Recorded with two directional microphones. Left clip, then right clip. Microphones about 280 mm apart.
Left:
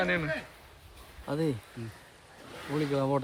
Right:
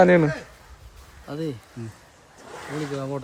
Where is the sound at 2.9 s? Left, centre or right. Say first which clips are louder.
Left 4 dB; left.